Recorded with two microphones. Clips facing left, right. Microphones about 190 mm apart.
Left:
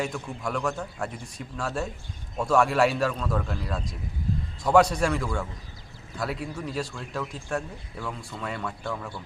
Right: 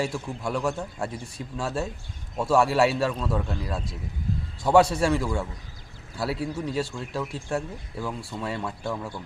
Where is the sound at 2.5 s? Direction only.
25° right (ahead or behind).